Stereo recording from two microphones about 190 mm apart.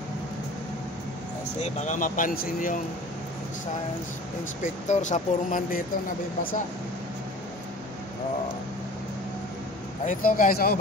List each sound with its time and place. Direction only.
1.6 s speech: 40° left (ahead or behind)
4.6 s speech: 40° left (ahead or behind)
10.0 s speech: 45° left (ahead or behind)